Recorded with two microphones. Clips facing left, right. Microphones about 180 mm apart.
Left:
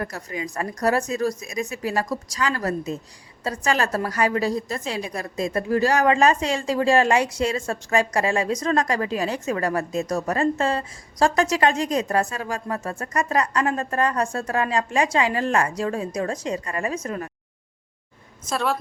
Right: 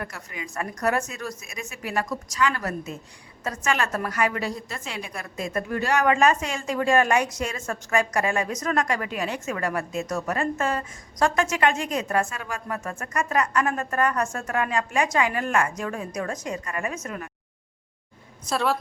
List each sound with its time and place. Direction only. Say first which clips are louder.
0.0 s a woman's voice: left 6 dB; 35° left (ahead or behind)
18.4 s a woman's voice: even; centre (ahead or behind)